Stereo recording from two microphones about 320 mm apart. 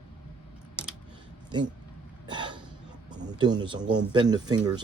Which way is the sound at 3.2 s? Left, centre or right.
Centre.